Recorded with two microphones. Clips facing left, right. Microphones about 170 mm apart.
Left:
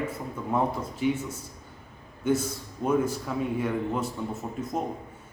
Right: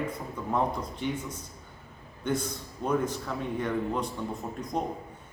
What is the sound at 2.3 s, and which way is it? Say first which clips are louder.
A man's voice: left 4 dB; 5° left (ahead or behind).